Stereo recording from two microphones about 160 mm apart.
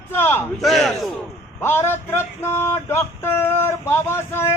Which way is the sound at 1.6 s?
15° left (ahead or behind).